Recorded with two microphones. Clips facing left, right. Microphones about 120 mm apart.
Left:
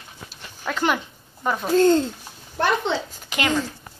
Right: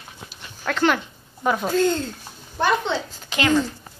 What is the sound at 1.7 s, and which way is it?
Speech, 35° left (ahead or behind).